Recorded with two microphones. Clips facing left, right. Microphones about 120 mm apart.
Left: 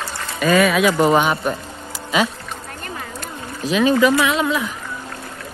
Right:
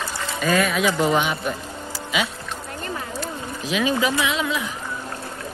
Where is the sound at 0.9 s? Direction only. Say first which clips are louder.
Left 5 dB; 45° left (ahead or behind).